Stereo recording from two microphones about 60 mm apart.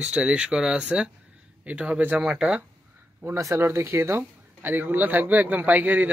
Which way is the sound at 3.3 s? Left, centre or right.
Right.